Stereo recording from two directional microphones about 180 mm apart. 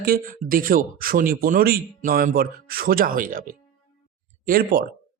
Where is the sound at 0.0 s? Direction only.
55° right (ahead or behind).